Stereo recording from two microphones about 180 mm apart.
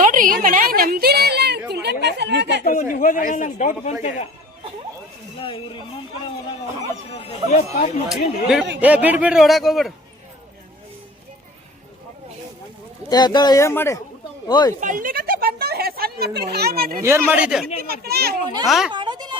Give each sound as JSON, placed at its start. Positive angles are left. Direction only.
{"t": 0.0, "sound": "a woman's voice", "side_deg": -50}
{"t": 2.9, "sound": "a man's voice", "side_deg": 50}
{"t": 5.4, "sound": "speech", "side_deg": 30}
{"t": 7.2, "sound": "speech", "side_deg": 40}
{"t": 8.1, "sound": "a man's voice", "side_deg": 0}
{"t": 13.1, "sound": "speech", "side_deg": 25}
{"t": 14.8, "sound": "speech", "side_deg": -45}
{"t": 17.0, "sound": "speech", "side_deg": -15}
{"t": 17.8, "sound": "speech", "side_deg": -60}
{"t": 18.6, "sound": "a man's voice", "side_deg": 0}
{"t": 18.9, "sound": "goat", "side_deg": -25}